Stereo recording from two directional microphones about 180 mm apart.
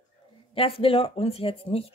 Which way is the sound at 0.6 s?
30° left (ahead or behind).